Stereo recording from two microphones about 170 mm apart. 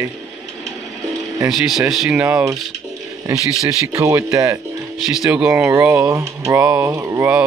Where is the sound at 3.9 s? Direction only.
20° right (ahead or behind).